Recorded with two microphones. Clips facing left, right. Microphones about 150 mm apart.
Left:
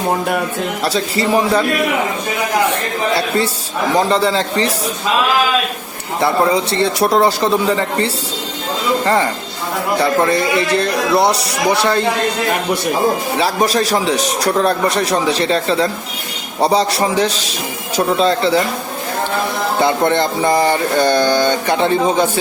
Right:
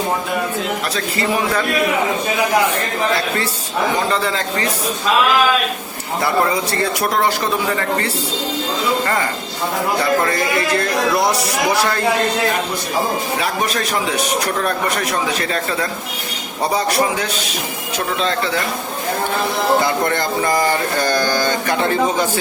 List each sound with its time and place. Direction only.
4.1 s speech: 30° left (ahead or behind)
6.2 s speech: 25° left (ahead or behind)
10.3 s speech: 25° left (ahead or behind)
13.4 s speech: 30° left (ahead or behind)
19.8 s speech: 20° left (ahead or behind)